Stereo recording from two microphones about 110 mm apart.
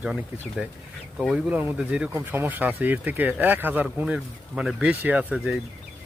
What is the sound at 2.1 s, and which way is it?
Speech, 20° right (ahead or behind).